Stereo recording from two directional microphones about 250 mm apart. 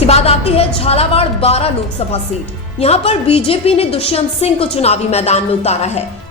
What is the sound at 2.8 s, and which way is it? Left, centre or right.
A woman's voice, left.